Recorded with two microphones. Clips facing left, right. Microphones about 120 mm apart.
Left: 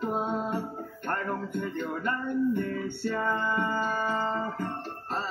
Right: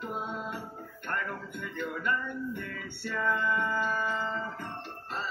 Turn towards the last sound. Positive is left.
turn(degrees=40)  # may be behind; listen again after turning